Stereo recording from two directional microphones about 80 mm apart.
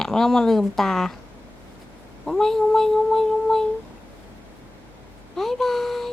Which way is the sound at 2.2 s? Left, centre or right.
Centre.